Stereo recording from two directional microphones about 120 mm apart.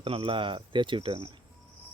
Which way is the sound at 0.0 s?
50° right (ahead or behind).